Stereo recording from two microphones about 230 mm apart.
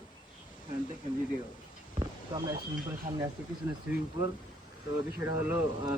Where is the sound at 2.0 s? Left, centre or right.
Centre.